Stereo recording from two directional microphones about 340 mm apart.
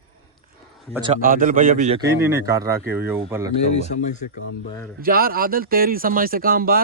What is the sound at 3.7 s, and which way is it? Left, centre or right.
Speech, left.